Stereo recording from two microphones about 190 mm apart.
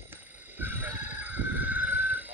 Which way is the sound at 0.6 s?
10° right (ahead or behind).